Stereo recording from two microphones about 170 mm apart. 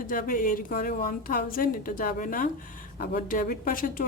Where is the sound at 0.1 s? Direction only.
55° left (ahead or behind).